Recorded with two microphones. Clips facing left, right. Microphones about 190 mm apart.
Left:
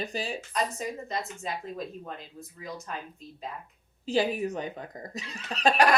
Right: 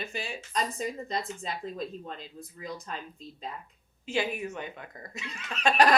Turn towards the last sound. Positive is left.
turn(degrees=35)  # may be behind; listen again after turning